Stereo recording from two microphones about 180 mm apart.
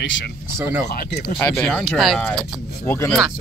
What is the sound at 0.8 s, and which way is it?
Speech, 60° left (ahead or behind).